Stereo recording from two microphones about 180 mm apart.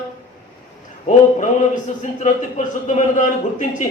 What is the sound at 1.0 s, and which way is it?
A man's voice, 45° left (ahead or behind).